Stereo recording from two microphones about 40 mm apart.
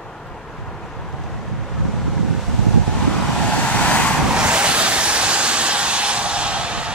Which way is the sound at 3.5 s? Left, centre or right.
Left.